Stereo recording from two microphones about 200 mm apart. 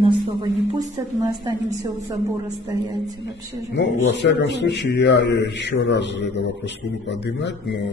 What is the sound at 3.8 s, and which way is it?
A man's voice, 60° left (ahead or behind).